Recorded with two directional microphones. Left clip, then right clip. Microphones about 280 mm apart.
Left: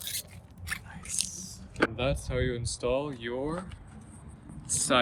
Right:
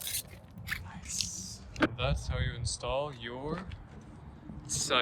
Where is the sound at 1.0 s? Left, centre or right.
Left.